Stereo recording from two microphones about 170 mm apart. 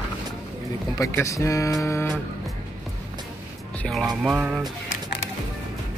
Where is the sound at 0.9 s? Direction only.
20° left (ahead or behind).